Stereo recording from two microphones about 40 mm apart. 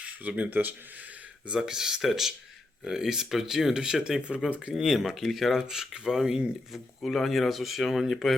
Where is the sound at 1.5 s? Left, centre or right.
Centre.